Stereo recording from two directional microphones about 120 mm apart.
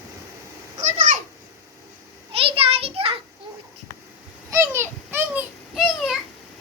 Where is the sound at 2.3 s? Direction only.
50° right (ahead or behind).